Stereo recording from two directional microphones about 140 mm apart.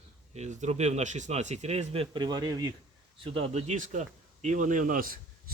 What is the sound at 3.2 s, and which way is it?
Speech, 45° right (ahead or behind).